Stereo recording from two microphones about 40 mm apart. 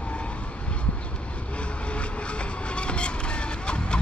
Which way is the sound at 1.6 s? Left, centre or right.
Left.